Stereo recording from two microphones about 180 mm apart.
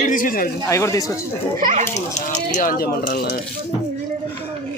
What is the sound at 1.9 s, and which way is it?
Speech, 40° left (ahead or behind).